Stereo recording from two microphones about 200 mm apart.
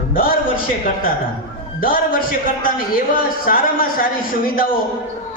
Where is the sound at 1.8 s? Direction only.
45° left (ahead or behind).